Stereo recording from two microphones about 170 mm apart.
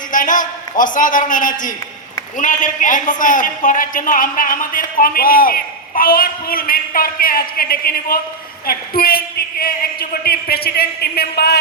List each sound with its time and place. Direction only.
0.1 s a man's voice: 50° left (ahead or behind); by 11.6 s 70° left (ahead or behind)